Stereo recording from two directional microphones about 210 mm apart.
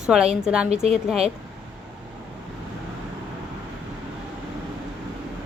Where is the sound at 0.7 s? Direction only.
30° right (ahead or behind).